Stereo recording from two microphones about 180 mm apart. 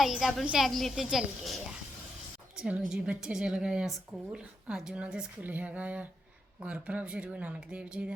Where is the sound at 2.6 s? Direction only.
5° right (ahead or behind).